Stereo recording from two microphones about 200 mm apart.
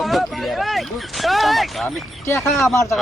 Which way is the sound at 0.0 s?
Centre (ahead or behind).